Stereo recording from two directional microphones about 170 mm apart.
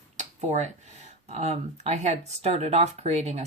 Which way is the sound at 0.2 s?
45° right (ahead or behind).